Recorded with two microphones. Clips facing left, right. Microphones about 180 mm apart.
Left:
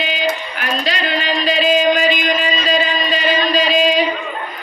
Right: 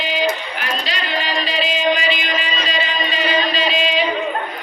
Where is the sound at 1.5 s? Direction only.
45° left (ahead or behind).